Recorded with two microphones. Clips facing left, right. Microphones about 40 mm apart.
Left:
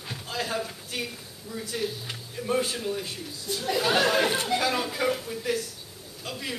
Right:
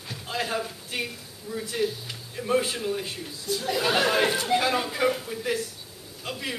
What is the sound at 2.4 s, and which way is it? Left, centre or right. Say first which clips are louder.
Speech: right 2 dB; centre.